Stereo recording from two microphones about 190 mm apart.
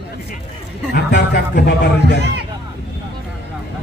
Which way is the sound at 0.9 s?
60° left (ahead or behind).